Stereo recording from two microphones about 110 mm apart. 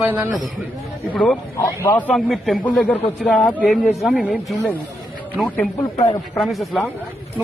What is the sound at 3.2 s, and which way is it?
Speech, 10° left (ahead or behind).